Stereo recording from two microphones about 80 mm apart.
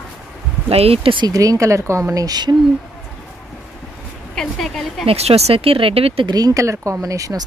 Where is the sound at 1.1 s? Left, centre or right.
Right.